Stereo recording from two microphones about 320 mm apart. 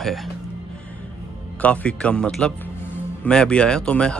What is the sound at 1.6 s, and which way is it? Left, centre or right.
Speech, centre.